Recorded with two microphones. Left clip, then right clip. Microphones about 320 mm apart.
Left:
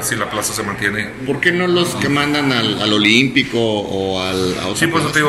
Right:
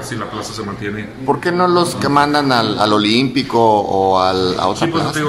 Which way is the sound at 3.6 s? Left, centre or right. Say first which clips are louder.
Right 6 dB; right.